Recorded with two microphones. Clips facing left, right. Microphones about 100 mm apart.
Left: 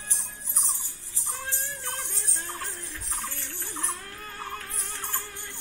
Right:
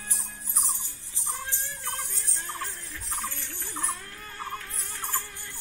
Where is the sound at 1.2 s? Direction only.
15° right (ahead or behind).